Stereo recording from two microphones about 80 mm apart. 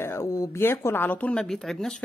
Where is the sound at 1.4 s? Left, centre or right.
Centre.